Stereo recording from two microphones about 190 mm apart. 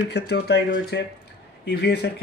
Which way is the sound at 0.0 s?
60° left (ahead or behind).